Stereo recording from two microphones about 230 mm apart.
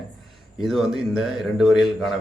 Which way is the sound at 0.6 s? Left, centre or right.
Centre.